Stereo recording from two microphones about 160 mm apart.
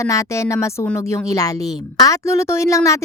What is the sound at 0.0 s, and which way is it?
Speech, 20° left (ahead or behind).